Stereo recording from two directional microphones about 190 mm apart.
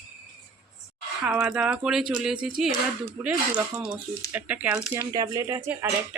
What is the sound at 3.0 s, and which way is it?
Speech, 15° right (ahead or behind).